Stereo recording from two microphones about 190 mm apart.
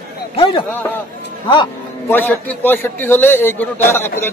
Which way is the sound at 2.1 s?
10° left (ahead or behind).